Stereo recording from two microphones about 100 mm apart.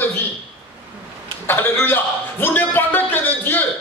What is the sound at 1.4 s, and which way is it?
A man's voice, 20° left (ahead or behind).